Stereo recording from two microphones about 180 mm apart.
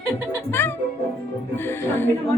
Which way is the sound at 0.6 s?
10° left (ahead or behind).